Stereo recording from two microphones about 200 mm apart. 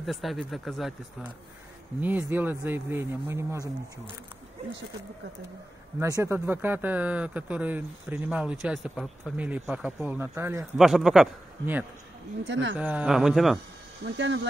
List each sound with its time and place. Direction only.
0.0 s speech: centre (ahead or behind)
5.9 s speech: 15° right (ahead or behind)
10.8 s speech: centre (ahead or behind)
12.4 s speech: 65° right (ahead or behind)
12.7 s speech: 5° right (ahead or behind)
14.0 s speech: 65° right (ahead or behind)